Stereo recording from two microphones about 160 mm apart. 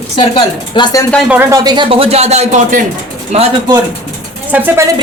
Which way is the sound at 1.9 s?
35° right (ahead or behind).